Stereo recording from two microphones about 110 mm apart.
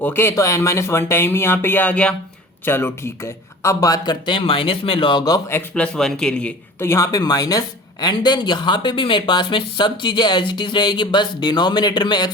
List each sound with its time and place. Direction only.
0.0 s speech: 20° left (ahead or behind)
3.6 s speech: 30° left (ahead or behind)
5.5 s speech: 20° left (ahead or behind)
5.8 s a man's voice: 5° left (ahead or behind)
6.7 s speech: 25° left (ahead or behind); by 12.3 s 40° left (ahead or behind)